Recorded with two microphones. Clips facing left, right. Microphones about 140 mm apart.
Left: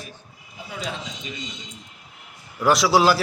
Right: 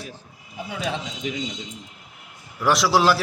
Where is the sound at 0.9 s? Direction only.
85° right.